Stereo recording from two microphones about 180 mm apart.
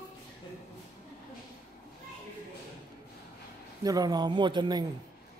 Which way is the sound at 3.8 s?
20° right (ahead or behind).